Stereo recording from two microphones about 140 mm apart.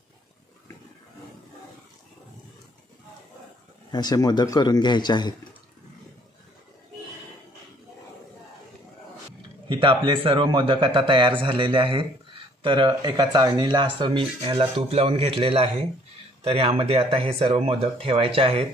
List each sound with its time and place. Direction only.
3.9 s a man's voice: 30° left (ahead or behind)
9.7 s speech: 35° right (ahead or behind)